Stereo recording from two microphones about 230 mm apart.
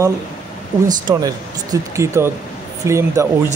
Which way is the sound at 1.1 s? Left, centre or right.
Centre.